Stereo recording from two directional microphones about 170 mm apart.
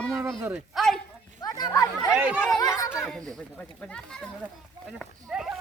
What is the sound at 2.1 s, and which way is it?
Speech, 10° right (ahead or behind).